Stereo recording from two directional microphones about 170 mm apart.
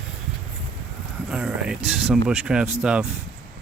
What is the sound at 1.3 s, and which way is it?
Speech, 5° right (ahead or behind).